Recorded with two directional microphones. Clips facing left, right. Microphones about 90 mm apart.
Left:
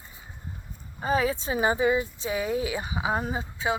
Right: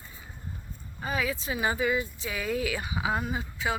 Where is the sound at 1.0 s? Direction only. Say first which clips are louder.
Left 5 dB; 30° left (ahead or behind).